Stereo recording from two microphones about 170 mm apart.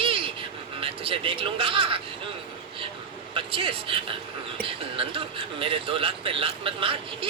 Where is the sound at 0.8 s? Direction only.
30° right (ahead or behind).